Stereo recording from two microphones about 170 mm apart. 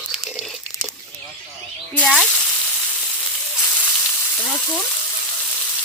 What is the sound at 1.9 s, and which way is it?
Cutlery, 5° left (ahead or behind).